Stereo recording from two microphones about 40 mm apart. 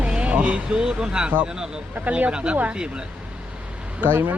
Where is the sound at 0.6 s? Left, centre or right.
Right.